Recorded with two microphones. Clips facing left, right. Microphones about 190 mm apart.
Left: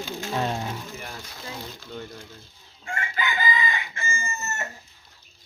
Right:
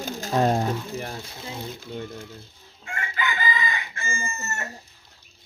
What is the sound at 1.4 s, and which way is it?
Speech, 20° right (ahead or behind).